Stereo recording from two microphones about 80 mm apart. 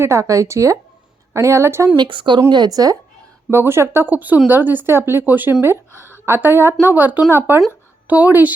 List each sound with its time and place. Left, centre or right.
0.0 s speech: right
2.0 s speech: right
2.5 s a woman's voice: right
3.5 s a woman's voice: right